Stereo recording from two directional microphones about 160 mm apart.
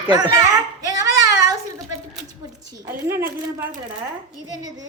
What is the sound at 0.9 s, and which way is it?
Child singing, 20° right (ahead or behind).